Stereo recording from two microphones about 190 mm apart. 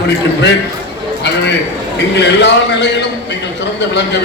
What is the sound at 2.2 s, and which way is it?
Speech, 65° left (ahead or behind).